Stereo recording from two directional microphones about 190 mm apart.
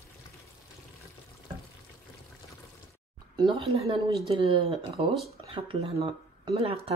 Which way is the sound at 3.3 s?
25° right (ahead or behind).